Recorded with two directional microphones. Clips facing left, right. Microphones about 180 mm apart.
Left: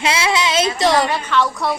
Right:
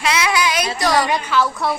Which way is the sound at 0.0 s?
25° left (ahead or behind).